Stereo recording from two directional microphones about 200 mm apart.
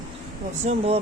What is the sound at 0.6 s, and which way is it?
Speech, 35° right (ahead or behind).